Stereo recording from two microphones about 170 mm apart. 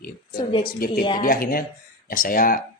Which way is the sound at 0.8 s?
55° left (ahead or behind).